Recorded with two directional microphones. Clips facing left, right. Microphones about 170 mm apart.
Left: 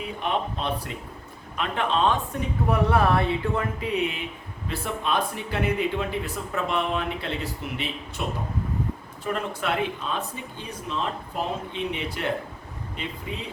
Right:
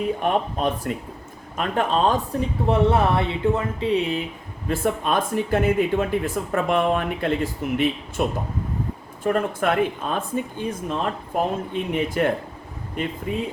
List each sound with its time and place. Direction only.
0.2 s speech: 45° right (ahead or behind)
2.6 s speech: 25° right (ahead or behind)
4.7 s speech: 45° right (ahead or behind)
9.2 s speech: 50° right (ahead or behind)